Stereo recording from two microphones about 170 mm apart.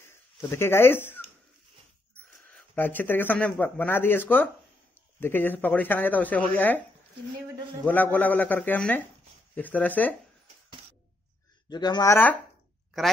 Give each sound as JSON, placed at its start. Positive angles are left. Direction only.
{"t": 0.4, "sound": "speech", "side_deg": 15}
{"t": 2.5, "sound": "speech", "side_deg": 10}
{"t": 7.8, "sound": "speech", "side_deg": 10}
{"t": 11.7, "sound": "speech", "side_deg": 25}